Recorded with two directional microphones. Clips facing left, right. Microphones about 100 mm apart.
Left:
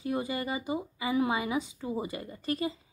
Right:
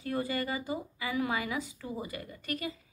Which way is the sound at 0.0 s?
20° left (ahead or behind).